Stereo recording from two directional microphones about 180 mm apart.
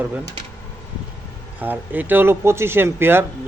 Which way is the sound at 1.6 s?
10° right (ahead or behind).